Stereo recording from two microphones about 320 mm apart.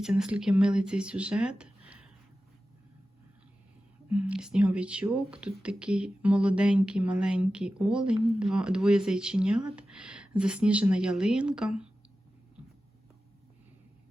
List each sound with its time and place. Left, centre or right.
0.0 s speech: centre
4.1 s speech: centre